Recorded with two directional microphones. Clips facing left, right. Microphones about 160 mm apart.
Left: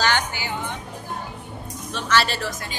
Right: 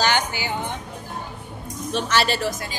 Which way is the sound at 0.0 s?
15° right (ahead or behind).